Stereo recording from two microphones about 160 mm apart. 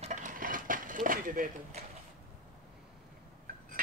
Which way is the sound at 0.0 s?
50° right (ahead or behind).